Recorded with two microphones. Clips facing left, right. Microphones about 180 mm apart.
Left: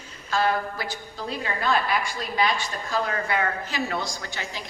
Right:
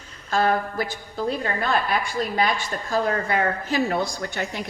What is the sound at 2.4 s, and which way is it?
A woman's voice, 50° right (ahead or behind).